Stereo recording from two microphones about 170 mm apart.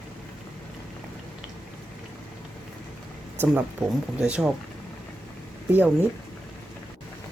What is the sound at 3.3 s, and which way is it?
Speech, 5° right (ahead or behind).